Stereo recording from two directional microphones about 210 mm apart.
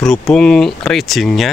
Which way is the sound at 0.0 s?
Centre (ahead or behind).